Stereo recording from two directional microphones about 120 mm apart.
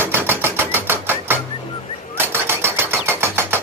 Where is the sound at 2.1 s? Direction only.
20° right (ahead or behind).